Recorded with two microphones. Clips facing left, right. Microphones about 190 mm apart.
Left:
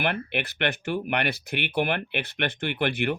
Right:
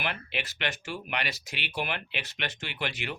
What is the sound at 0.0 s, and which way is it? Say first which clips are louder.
Speech: left 7 dB; 60° left (ahead or behind).